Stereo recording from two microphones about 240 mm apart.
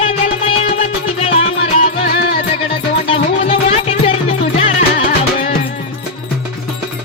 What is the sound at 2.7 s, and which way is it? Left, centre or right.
Music, left.